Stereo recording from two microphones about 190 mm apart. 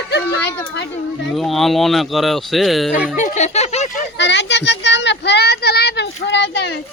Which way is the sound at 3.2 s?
40° left (ahead or behind).